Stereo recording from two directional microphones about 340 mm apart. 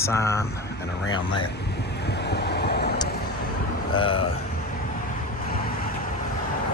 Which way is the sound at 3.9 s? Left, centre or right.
Centre.